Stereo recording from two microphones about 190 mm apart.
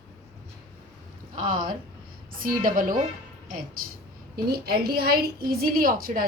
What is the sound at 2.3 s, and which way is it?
Speech, 50° right (ahead or behind).